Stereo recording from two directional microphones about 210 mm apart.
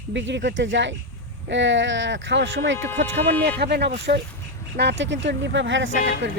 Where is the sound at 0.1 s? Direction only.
60° right (ahead or behind).